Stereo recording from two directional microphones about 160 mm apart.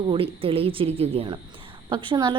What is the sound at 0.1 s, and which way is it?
A woman's voice, 35° right (ahead or behind).